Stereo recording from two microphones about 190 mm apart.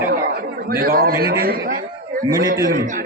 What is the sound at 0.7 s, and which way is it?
A man's voice, 55° right (ahead or behind).